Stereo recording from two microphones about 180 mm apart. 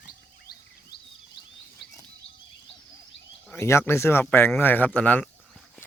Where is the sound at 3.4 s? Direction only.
15° left (ahead or behind).